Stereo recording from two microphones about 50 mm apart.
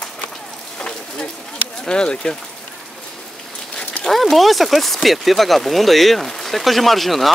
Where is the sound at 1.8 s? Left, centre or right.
Centre.